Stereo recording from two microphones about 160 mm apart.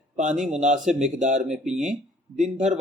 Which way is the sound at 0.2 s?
50° right (ahead or behind).